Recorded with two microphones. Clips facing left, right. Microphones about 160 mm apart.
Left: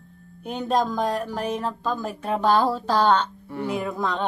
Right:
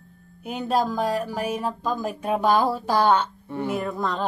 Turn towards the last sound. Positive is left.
turn(degrees=0)  # may be behind; listen again after turning